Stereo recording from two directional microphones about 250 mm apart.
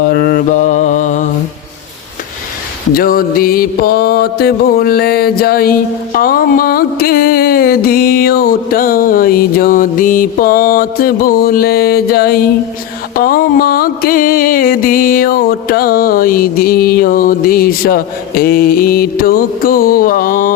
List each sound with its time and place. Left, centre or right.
0.0 s mantra: left
2.9 s music: left